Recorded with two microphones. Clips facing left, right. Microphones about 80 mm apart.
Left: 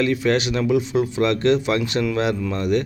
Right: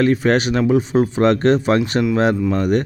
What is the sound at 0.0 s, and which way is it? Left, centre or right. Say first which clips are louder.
Speech: right 4 dB; right.